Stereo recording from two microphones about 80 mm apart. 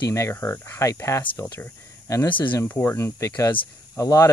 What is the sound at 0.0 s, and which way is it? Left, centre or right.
Speech, left.